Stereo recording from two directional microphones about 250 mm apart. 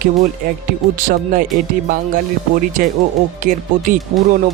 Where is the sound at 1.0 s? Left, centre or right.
Right.